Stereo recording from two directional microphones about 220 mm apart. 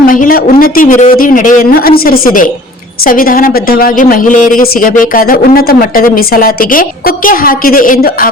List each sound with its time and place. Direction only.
0.0 s speech: 40° left (ahead or behind)